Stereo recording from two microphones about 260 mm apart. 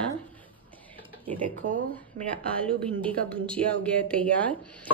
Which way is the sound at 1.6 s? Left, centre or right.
Right.